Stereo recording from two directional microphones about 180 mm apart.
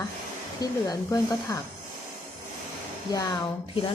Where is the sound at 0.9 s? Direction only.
15° left (ahead or behind).